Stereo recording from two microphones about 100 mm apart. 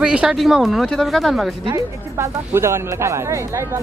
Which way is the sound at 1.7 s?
25° right (ahead or behind).